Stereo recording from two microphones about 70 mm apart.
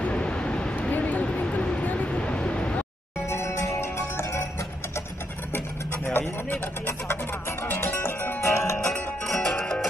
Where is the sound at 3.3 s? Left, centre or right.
Left.